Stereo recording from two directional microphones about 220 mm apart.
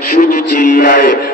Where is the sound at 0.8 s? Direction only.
40° left (ahead or behind).